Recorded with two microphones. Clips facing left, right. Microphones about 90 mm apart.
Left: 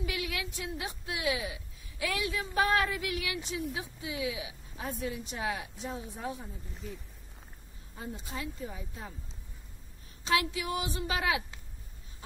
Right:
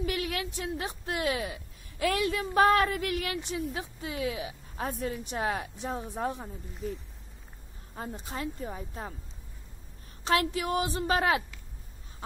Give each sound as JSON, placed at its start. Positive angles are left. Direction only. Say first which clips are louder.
{"t": 0.0, "sound": "a woman's voice", "louder": "right 4 dB", "side_deg": -50}
{"t": 7.9, "sound": "speech", "louder": "right 3 dB", "side_deg": -50}
{"t": 10.2, "sound": "speech", "louder": "right 3 dB", "side_deg": -45}